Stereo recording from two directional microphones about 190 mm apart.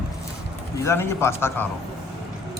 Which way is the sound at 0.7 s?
15° left (ahead or behind).